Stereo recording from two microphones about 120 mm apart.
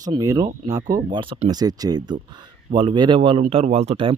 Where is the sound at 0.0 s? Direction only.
30° right (ahead or behind); by 3.4 s 45° right (ahead or behind).